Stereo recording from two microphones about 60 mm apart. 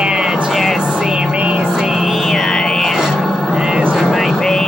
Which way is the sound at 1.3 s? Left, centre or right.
Right.